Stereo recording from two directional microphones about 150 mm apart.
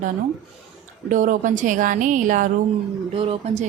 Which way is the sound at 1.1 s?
60° right (ahead or behind).